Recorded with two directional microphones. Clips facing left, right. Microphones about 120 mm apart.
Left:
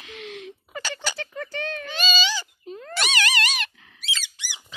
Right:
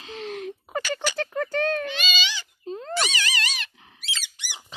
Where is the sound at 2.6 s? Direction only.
30° right (ahead or behind).